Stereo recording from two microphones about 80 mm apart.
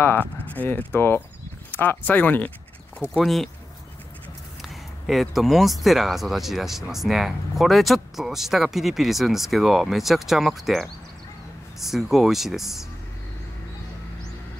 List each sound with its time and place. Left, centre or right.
0.7 s speech: left
3.2 s speech: centre
4.6 s speech: centre